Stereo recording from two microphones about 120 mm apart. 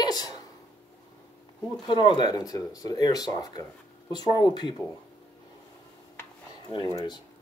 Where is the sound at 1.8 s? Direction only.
40° left (ahead or behind).